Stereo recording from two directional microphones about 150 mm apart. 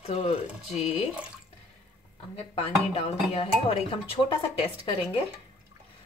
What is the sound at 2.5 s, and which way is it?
Speech, 40° left (ahead or behind).